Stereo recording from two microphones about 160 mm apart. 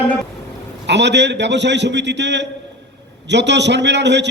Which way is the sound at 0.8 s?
90° right.